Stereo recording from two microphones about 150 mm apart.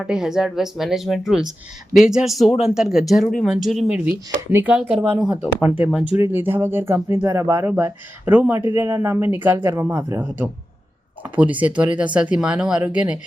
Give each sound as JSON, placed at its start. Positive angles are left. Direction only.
{"t": 0.0, "sound": "a woman's voice", "side_deg": -5}
{"t": 11.2, "sound": "speech", "side_deg": -10}